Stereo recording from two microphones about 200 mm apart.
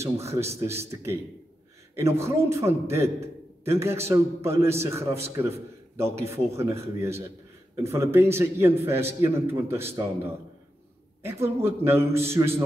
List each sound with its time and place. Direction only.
0.0 s a man's voice: 15° right (ahead or behind)